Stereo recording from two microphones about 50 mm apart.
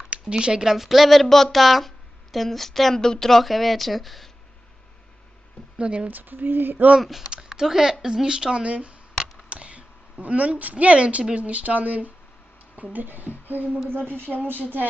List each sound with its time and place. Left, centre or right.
0.1 s speech: centre
5.7 s speech: right
6.1 s female singing: right
7.0 s speech: centre; by 13.7 s right
13.8 s female singing: right
14.3 s speech: centre